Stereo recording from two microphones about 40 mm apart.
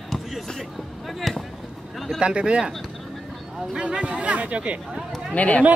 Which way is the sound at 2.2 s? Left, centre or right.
Right.